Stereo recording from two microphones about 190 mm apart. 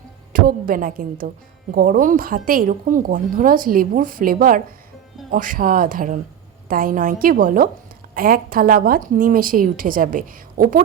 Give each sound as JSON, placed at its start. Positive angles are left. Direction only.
{"t": 0.3, "sound": "a woman's voice", "side_deg": -50}